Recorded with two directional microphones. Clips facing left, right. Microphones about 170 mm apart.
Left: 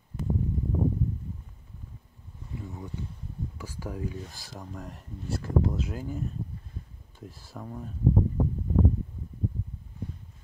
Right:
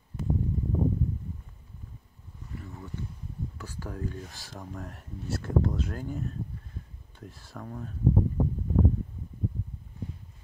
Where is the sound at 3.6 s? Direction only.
10° left (ahead or behind).